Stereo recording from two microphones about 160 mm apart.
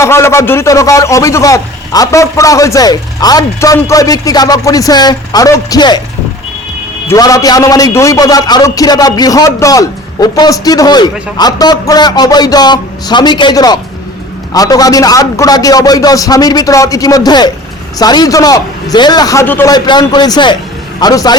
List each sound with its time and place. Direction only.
0.0 s a man's voice: 15° left (ahead or behind)
7.1 s a man's voice: 20° left (ahead or behind)
19.7 s a man's voice: 25° left (ahead or behind)